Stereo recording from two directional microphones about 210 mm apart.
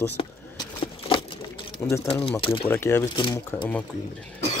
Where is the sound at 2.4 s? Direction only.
25° left (ahead or behind).